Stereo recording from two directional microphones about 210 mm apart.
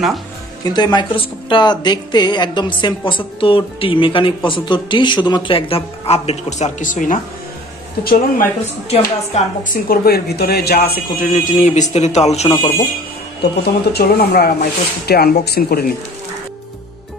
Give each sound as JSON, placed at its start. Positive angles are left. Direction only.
{"t": 0.7, "sound": "a woman's voice", "side_deg": 20}
{"t": 8.9, "sound": "speech", "side_deg": 35}
{"t": 11.1, "sound": "speech", "side_deg": 40}
{"t": 13.4, "sound": "speech", "side_deg": 50}